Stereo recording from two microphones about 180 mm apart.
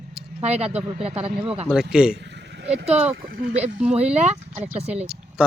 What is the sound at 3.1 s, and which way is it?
Speech, 55° right (ahead or behind).